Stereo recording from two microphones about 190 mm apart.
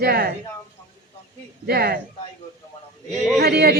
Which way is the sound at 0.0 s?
55° right (ahead or behind).